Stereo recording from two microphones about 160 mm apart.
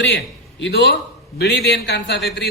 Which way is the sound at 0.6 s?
90° left.